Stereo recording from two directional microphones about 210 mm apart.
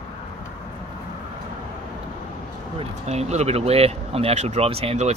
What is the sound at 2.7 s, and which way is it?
Speech, 30° right (ahead or behind).